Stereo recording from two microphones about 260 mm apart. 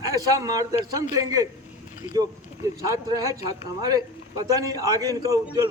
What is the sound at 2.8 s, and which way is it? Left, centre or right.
Speech, centre.